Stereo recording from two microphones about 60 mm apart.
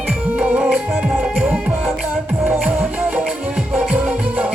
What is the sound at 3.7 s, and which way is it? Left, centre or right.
Music, right.